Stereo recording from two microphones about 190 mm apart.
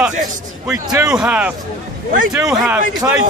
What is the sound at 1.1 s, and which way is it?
A man's voice, 5° right (ahead or behind).